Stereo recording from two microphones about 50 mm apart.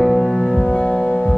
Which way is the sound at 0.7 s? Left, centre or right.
Centre.